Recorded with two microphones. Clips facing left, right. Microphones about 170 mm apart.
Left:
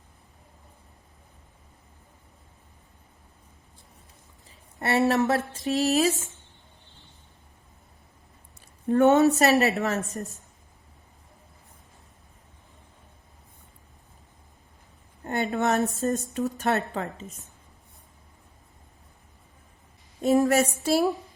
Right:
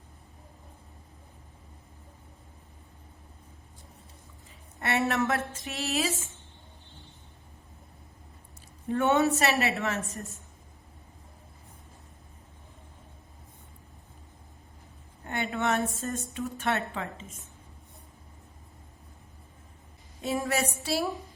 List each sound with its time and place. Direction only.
4.8 s speech: 35° left (ahead or behind)
8.9 s speech: 40° left (ahead or behind)
15.2 s a woman's voice: 40° left (ahead or behind)
20.2 s a woman's voice: 45° left (ahead or behind)